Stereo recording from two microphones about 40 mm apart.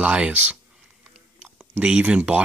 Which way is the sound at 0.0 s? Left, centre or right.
Right.